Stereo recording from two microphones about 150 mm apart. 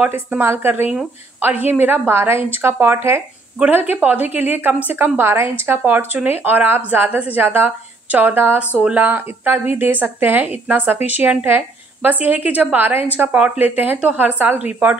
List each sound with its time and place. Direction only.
0.0 s speech: 10° right (ahead or behind)